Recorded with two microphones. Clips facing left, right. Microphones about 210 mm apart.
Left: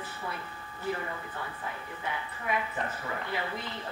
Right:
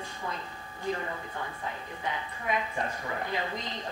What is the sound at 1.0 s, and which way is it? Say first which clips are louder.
Speech: right 1 dB; 25° right (ahead or behind).